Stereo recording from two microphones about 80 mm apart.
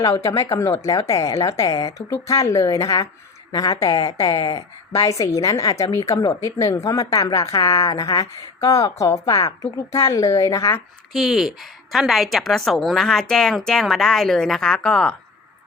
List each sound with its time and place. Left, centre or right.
0.0 s a woman's voice: left
4.4 s speech: left
4.9 s a woman's voice: left
11.1 s a woman's voice: centre